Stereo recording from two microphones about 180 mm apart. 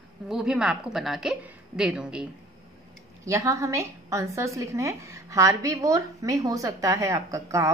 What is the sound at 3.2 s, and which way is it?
A woman's voice, 15° right (ahead or behind).